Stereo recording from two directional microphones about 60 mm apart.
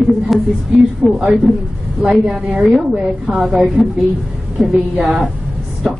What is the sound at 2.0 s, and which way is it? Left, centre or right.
A woman's voice, centre.